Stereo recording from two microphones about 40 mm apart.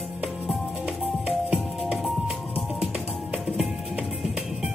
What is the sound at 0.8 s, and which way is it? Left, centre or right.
Music, centre.